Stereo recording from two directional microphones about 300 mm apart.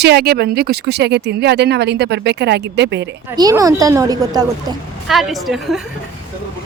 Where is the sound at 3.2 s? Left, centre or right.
Centre.